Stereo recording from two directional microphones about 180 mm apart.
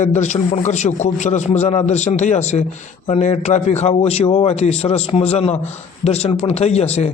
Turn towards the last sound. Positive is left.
turn(degrees=35)  # may be behind; listen again after turning